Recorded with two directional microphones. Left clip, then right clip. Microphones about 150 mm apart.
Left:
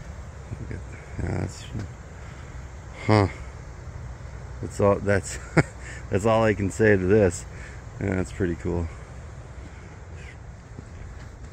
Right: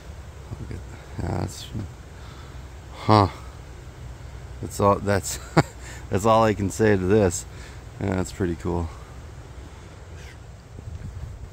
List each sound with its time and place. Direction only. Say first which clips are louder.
1.2 s a sound: right 2 dB; 25° right (ahead or behind)
3.0 s speech: right 4 dB; 30° right (ahead or behind)
4.6 s a man's voice: right 1 dB; 25° right (ahead or behind)